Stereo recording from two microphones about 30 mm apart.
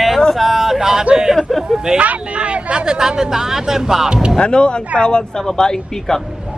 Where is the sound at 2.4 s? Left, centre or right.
Right.